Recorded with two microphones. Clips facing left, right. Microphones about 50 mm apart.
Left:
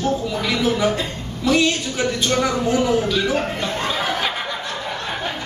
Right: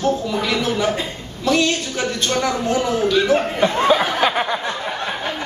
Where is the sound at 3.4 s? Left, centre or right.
Right.